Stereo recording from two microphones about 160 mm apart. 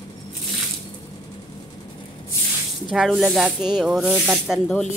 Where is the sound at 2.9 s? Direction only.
Centre (ahead or behind).